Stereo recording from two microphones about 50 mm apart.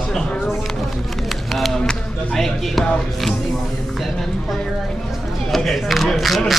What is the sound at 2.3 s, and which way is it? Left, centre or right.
Speech, centre.